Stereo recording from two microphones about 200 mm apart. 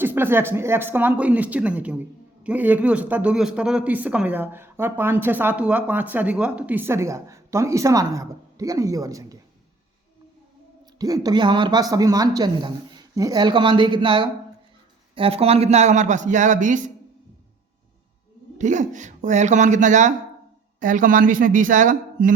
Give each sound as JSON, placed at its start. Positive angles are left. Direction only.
{"t": 0.0, "sound": "speech", "side_deg": -10}
{"t": 10.9, "sound": "a man's voice", "side_deg": -20}
{"t": 18.5, "sound": "a man's voice", "side_deg": -35}